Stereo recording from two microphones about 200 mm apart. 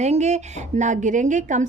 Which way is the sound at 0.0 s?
35° right (ahead or behind).